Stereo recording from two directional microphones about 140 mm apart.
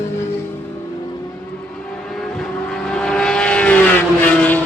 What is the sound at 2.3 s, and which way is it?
Vehicle, 5° left (ahead or behind).